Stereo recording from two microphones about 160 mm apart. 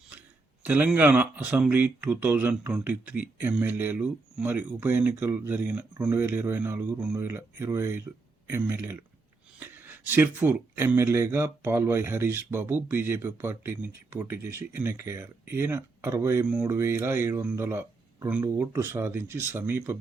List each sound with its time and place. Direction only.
0.6 s speech: 10° right (ahead or behind)